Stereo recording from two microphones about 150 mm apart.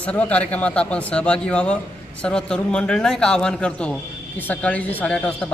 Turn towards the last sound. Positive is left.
turn(degrees=5)  # may be behind; listen again after turning